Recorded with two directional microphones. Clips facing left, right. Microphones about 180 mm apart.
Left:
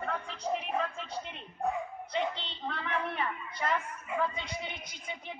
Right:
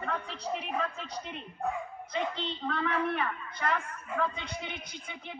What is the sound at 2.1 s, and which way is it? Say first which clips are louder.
Speech: right 1 dB; 45° right (ahead or behind).